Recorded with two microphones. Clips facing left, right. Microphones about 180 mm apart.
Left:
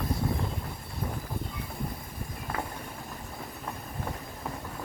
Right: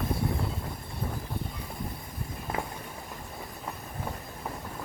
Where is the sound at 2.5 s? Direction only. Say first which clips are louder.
Right 1 dB; 20° right (ahead or behind).